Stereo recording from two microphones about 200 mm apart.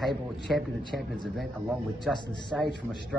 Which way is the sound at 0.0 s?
Centre (ahead or behind).